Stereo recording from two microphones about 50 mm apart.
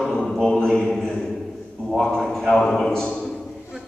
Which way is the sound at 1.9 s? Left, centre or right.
Centre.